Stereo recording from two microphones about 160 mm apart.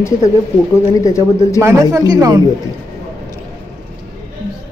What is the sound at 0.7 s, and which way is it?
Speech, 20° left (ahead or behind).